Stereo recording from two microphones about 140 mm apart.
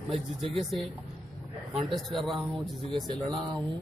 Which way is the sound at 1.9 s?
Centre (ahead or behind).